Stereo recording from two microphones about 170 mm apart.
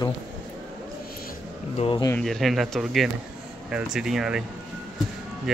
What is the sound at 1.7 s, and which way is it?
Speech, 35° left (ahead or behind).